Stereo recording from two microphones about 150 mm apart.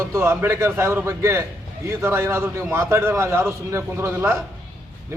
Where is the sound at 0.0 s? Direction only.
20° right (ahead or behind).